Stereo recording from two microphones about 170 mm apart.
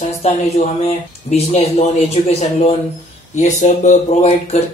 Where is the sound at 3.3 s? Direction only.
45° left (ahead or behind).